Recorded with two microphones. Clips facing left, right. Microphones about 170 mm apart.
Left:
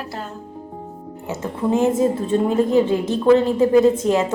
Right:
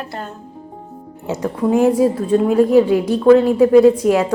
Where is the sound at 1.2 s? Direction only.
15° right (ahead or behind).